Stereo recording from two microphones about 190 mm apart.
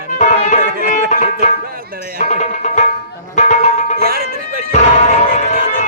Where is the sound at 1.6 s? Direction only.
50° right (ahead or behind).